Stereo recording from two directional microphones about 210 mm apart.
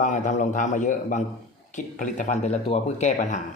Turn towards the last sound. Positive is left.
turn(degrees=35)  # may be behind; listen again after turning